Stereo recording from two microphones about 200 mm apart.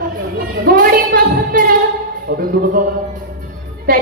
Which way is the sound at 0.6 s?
45° right (ahead or behind).